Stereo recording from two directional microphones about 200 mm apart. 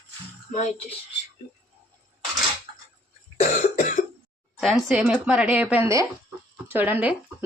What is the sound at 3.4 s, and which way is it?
Cough, 35° left (ahead or behind).